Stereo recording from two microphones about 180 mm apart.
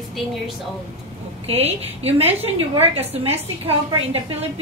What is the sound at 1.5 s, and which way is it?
A woman's voice, 35° right (ahead or behind).